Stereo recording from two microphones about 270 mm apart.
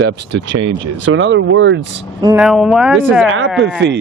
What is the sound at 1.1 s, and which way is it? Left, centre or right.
Speech, right.